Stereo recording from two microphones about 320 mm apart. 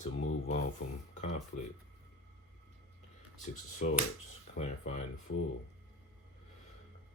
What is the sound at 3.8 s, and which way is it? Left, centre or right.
Speech, left.